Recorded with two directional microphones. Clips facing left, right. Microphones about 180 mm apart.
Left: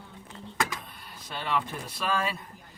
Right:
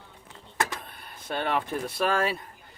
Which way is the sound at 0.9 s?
55° right (ahead or behind).